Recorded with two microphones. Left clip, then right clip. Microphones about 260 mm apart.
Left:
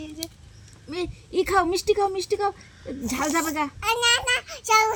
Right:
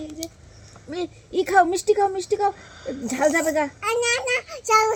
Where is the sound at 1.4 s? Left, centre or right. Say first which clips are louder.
Right 3 dB; left.